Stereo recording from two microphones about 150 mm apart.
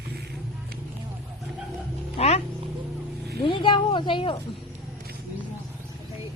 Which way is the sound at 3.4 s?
35° left (ahead or behind).